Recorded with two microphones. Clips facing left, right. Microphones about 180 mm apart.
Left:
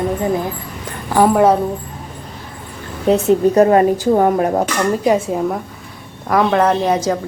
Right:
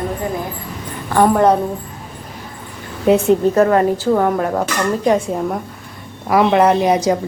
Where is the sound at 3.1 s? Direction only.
Centre (ahead or behind).